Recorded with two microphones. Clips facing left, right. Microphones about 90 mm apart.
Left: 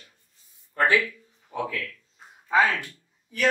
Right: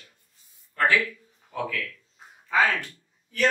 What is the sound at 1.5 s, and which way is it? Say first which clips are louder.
Speech: left 1 dB; 20° left (ahead or behind).